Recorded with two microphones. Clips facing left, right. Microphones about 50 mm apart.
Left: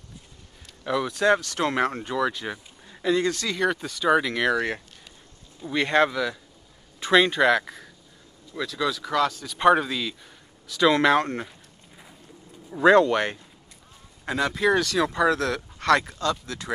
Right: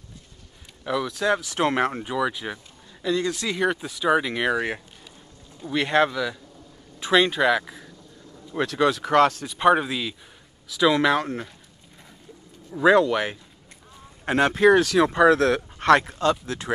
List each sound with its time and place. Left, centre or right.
0.8 s speech: centre
1.5 s speech: centre
2.9 s speech: centre
3.3 s speech: centre
8.5 s speech: right
9.5 s speech: centre
12.7 s speech: centre
14.2 s speech: right
14.8 s speech: centre
15.0 s speech: right